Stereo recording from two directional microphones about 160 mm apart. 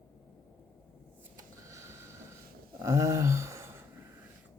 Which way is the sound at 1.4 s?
20° right (ahead or behind).